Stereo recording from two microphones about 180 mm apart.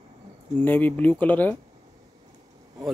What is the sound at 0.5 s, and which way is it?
Speech, 10° left (ahead or behind).